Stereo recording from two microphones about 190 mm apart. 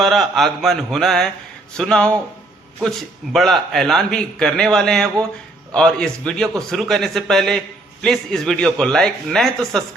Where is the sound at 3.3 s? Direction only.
Centre (ahead or behind).